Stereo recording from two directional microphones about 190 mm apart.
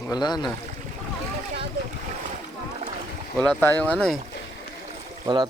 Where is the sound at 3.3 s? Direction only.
5° left (ahead or behind).